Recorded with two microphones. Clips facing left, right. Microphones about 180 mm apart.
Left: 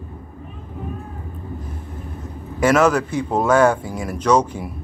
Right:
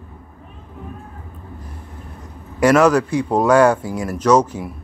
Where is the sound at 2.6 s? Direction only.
5° left (ahead or behind).